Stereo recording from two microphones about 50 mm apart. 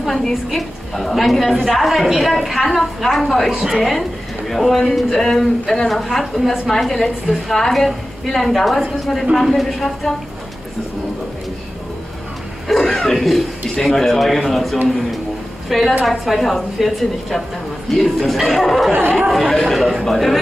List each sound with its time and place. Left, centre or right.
0.0 s a woman's voice: centre
12.6 s a woman's voice: centre